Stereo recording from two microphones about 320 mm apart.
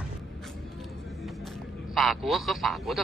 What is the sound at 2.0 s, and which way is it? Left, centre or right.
Speech, centre.